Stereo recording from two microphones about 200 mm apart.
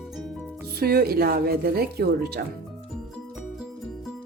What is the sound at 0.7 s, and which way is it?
A woman's voice, 50° right (ahead or behind).